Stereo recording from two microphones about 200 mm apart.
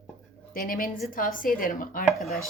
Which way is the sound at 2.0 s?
Centre (ahead or behind).